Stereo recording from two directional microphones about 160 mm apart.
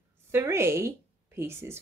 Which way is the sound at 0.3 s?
15° right (ahead or behind).